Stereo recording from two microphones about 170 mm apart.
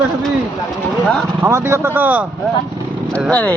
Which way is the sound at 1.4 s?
15° right (ahead or behind).